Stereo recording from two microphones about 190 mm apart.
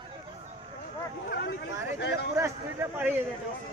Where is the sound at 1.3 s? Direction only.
50° left (ahead or behind).